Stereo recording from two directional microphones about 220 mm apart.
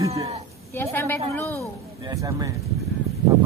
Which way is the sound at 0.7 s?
10° left (ahead or behind).